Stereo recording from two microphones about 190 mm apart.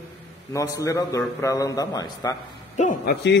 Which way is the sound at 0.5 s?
15° left (ahead or behind).